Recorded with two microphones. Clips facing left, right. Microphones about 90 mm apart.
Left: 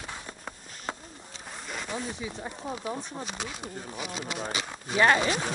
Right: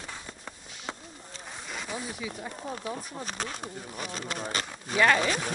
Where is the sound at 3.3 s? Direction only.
45° right (ahead or behind).